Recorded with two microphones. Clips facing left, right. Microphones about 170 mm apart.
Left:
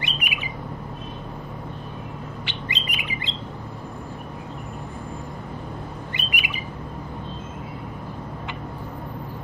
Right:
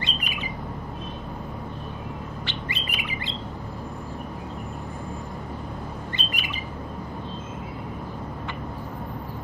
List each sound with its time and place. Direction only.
0.0 s bird: 15° left (ahead or behind)
2.4 s bird: 15° left (ahead or behind)
6.1 s bird: 15° left (ahead or behind)